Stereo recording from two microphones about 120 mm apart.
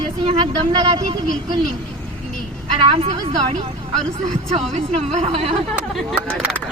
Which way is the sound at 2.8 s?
50° right (ahead or behind).